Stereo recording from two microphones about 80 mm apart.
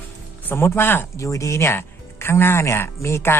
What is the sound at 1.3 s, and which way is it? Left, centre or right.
Speech, left.